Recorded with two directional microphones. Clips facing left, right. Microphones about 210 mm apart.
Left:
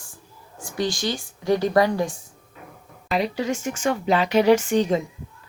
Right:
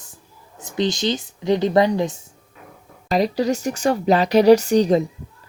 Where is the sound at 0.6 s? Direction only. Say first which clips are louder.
Right 4 dB; 20° right (ahead or behind).